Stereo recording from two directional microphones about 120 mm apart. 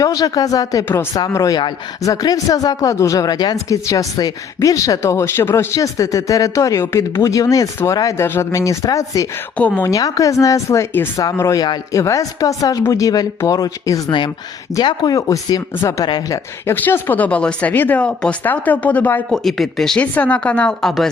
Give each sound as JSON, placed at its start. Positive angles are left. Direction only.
{"t": 0.0, "sound": "speech", "side_deg": 30}
{"t": 9.6, "sound": "speech", "side_deg": 10}
{"t": 9.8, "sound": "speech", "side_deg": 30}
{"t": 16.0, "sound": "speech", "side_deg": 35}
{"t": 16.6, "sound": "speech", "side_deg": 15}
{"t": 19.3, "sound": "speech", "side_deg": 0}